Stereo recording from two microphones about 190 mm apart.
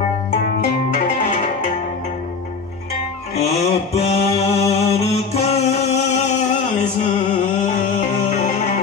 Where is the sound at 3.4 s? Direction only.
35° left (ahead or behind).